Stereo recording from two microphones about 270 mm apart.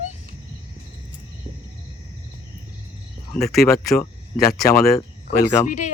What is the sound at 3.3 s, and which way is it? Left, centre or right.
Speech, centre.